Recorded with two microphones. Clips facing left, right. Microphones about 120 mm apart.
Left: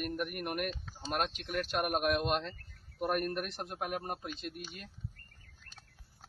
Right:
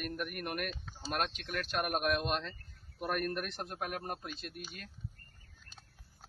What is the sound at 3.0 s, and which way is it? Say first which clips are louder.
A man's voice: left 2 dB; 20° left (ahead or behind).